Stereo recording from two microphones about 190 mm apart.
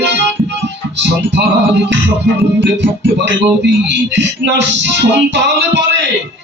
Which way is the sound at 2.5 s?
65° right (ahead or behind).